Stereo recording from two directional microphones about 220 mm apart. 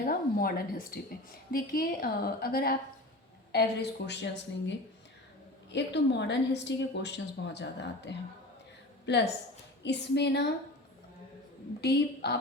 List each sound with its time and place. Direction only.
0.0 s a woman's voice: 40° left (ahead or behind)
5.7 s a woman's voice: 50° left (ahead or behind)
11.8 s a woman's voice: 45° left (ahead or behind)